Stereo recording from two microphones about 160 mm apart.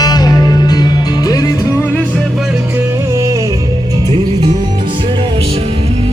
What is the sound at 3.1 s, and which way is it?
Music, 20° right (ahead or behind).